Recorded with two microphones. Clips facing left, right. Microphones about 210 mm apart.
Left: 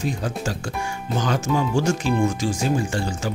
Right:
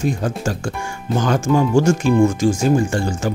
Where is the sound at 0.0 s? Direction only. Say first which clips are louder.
Right 5 dB; 50° right (ahead or behind).